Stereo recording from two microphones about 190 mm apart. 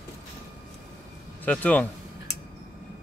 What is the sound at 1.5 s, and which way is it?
Speech, 10° left (ahead or behind).